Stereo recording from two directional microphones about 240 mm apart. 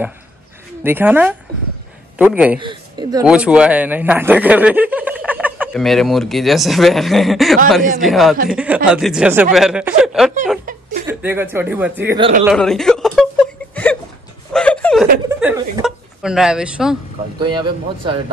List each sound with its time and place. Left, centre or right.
0.8 s speech: centre
2.6 s speech: centre
3.3 s speech: centre
10.6 s chuckle: right
11.1 s speech: centre
12.4 s a sound: centre
14.5 s chuckle: centre
15.4 s hiccup: centre
17.4 s speech: centre